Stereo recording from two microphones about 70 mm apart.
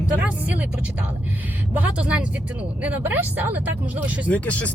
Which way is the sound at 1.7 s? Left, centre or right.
Right.